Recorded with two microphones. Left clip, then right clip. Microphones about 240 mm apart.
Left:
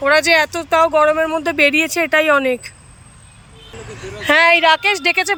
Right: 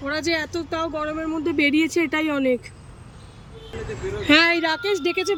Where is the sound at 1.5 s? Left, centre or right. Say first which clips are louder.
Left 4 dB; centre.